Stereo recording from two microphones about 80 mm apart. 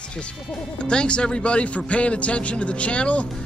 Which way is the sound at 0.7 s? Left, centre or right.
Centre.